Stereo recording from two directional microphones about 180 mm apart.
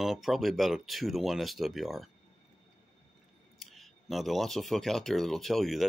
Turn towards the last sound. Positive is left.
turn(degrees=0)  # may be behind; listen again after turning